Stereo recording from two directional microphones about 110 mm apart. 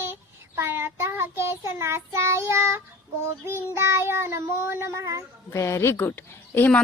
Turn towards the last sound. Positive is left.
turn(degrees=20)  # may be behind; listen again after turning